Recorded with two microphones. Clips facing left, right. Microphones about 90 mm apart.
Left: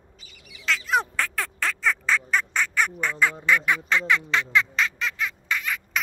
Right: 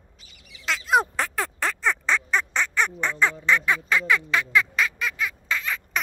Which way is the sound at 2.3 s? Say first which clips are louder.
Even; 25° right (ahead or behind).